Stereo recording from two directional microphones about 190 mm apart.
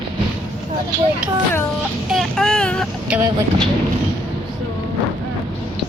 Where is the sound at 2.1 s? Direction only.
5° left (ahead or behind).